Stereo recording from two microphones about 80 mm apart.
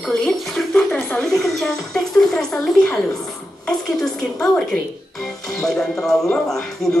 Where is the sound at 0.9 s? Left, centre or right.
Centre.